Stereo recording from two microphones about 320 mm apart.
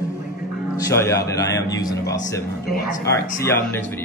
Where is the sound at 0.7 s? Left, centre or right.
Centre.